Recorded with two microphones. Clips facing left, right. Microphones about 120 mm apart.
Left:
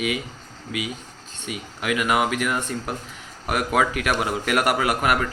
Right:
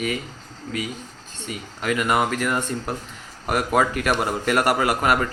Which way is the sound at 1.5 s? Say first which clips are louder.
Right 1 dB; 5° left (ahead or behind).